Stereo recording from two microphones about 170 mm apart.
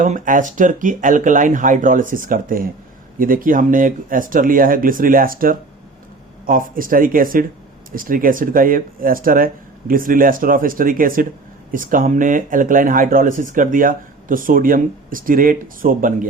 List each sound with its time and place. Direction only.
0.0 s speech: 50° right (ahead or behind)